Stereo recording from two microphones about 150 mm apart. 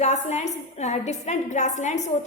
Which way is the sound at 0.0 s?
50° left (ahead or behind).